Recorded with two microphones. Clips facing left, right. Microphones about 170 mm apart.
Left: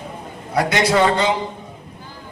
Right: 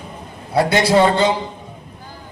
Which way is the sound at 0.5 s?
30° right (ahead or behind).